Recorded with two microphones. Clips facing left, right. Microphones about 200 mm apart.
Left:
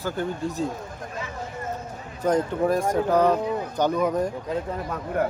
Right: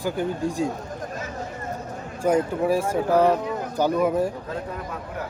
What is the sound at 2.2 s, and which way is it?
Speech, 10° right (ahead or behind).